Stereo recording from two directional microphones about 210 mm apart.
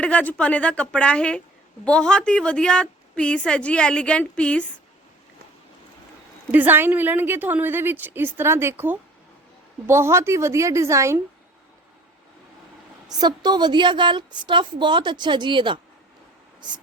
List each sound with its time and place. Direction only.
0.0 s a woman's voice: 5° left (ahead or behind)
6.5 s a woman's voice: 10° right (ahead or behind)
13.1 s a woman's voice: 20° right (ahead or behind)